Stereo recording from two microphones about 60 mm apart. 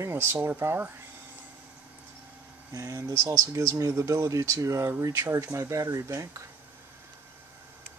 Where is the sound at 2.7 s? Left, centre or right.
Right.